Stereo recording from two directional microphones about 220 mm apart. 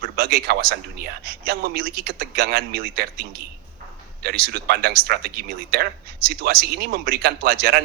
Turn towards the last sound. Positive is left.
turn(degrees=-45)  # may be behind; listen again after turning